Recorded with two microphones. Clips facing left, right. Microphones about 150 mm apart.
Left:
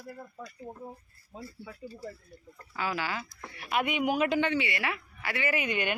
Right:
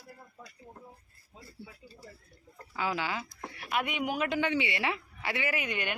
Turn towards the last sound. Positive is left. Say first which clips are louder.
# left 4 dB
turn(degrees=0)  # may be behind; listen again after turning